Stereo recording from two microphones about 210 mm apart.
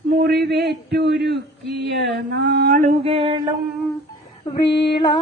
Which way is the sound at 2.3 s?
50° right (ahead or behind).